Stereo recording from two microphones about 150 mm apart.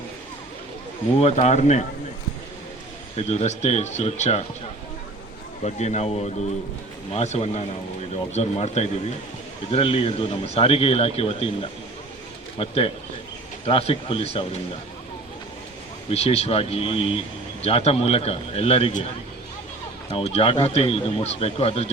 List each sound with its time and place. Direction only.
1.2 s speech: 45° left (ahead or behind)
3.2 s speech: 45° left (ahead or behind)
5.6 s a man's voice: 50° left (ahead or behind)
16.0 s a man's voice: 45° left (ahead or behind)
20.1 s a man's voice: 45° left (ahead or behind)